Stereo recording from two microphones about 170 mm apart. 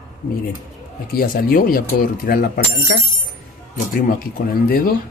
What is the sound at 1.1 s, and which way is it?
Speech, 60° left (ahead or behind).